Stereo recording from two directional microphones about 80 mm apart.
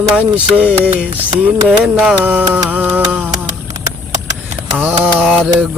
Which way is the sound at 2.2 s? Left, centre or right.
Right.